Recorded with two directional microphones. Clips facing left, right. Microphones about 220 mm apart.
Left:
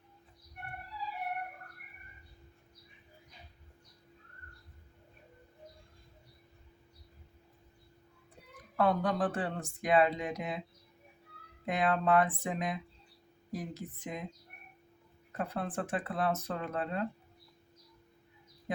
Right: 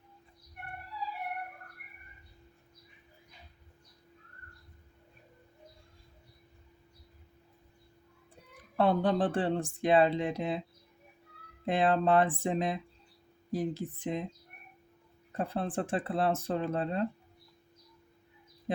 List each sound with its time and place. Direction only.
8.7 s speech: 30° right (ahead or behind)
11.6 s speech: 30° right (ahead or behind)
15.3 s speech: 30° right (ahead or behind)